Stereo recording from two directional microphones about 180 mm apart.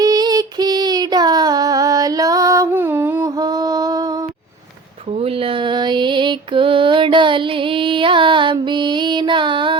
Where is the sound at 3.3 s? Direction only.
20° right (ahead or behind).